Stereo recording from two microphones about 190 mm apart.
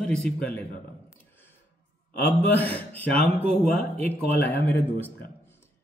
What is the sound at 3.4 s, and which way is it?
Speech, 35° right (ahead or behind).